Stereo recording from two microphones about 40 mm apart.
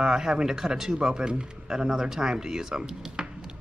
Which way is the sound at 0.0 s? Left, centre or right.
Centre.